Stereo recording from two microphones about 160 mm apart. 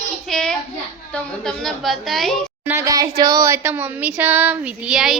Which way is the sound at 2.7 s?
20° right (ahead or behind).